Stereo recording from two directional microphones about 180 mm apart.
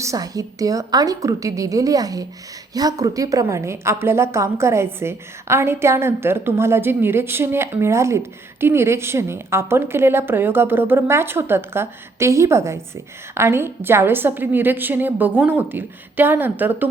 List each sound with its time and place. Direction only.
0.0 s a woman's voice: 20° right (ahead or behind)